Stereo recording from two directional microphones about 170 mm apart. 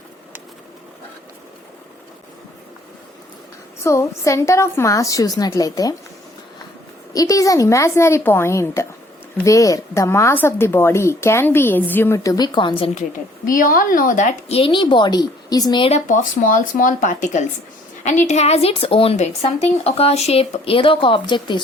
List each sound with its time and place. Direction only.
3.8 s speech: 15° left (ahead or behind)
7.1 s speech: 20° left (ahead or behind)
12.9 s a woman's voice: 50° left (ahead or behind); by 15.9 s 25° left (ahead or behind)
15.9 s a woman's voice: 50° left (ahead or behind); by 21.6 s 25° left (ahead or behind)